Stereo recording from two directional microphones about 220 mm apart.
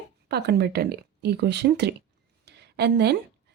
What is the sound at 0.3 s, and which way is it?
Speech, 50° right (ahead or behind).